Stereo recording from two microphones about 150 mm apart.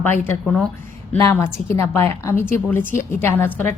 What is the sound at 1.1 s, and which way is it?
A woman's voice, 15° left (ahead or behind).